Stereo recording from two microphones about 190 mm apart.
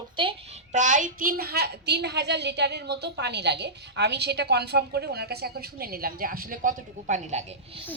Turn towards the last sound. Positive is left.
turn(degrees=-35)  # may be behind; listen again after turning